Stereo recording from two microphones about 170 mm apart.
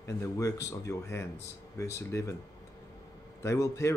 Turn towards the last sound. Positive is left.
turn(degrees=15)  # may be behind; listen again after turning